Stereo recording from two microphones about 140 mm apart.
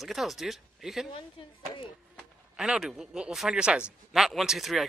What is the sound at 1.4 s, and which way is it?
Speech, 40° left (ahead or behind).